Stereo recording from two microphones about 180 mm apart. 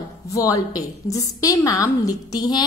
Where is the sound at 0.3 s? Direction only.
20° left (ahead or behind).